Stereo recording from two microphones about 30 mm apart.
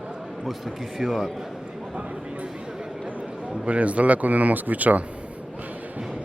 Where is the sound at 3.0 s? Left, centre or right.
Right.